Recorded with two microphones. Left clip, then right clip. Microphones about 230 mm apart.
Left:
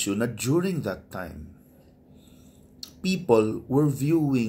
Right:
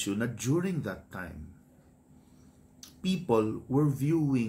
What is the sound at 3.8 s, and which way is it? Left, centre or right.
Speech, right.